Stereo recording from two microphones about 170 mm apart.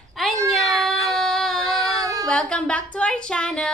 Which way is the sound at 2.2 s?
5° left (ahead or behind).